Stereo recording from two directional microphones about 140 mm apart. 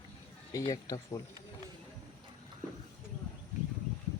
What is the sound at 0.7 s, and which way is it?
Speech, 30° left (ahead or behind).